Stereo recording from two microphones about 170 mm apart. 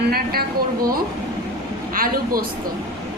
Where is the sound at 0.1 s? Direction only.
65° right (ahead or behind).